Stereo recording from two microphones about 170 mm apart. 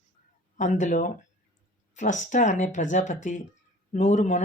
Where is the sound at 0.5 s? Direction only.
45° left (ahead or behind).